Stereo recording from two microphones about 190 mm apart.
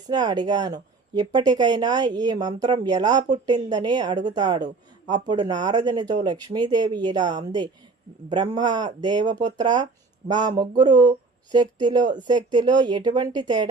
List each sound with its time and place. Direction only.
0.1 s speech: 20° right (ahead or behind)